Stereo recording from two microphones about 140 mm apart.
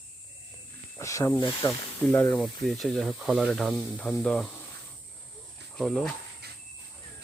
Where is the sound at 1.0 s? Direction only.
20° left (ahead or behind).